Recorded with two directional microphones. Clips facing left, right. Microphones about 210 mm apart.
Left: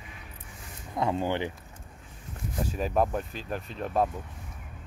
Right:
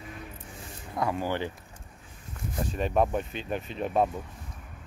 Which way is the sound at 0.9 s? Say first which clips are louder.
Left 1 dB; 25° left (ahead or behind).